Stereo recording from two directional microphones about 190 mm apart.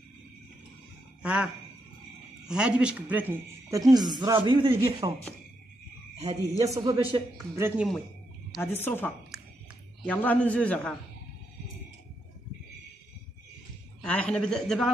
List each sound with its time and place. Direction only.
1.2 s speech: 5° right (ahead or behind)
3.9 s a man's voice: 20° right (ahead or behind)
6.2 s speech: 20° right (ahead or behind)
8.7 s a man's voice: 10° left (ahead or behind)
14.0 s speech: 5° left (ahead or behind)